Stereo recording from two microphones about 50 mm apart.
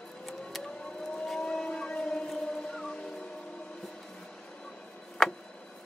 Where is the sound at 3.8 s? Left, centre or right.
Centre.